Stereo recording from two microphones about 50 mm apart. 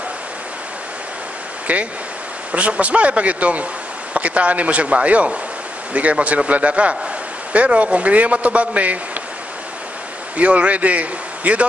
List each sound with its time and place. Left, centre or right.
1.7 s a man's voice: right
10.3 s a man's voice: right